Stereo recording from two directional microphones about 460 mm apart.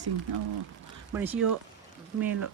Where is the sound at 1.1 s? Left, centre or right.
Centre.